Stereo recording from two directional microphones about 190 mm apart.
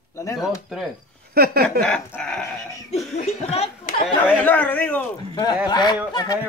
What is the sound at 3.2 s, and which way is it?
Speech, 35° left (ahead or behind).